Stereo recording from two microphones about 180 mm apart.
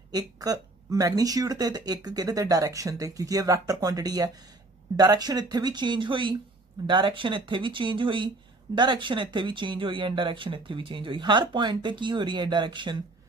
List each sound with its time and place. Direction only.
0.1 s speech: 20° right (ahead or behind)